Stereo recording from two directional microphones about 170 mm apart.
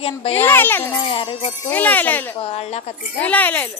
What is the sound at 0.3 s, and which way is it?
Speech, 10° left (ahead or behind).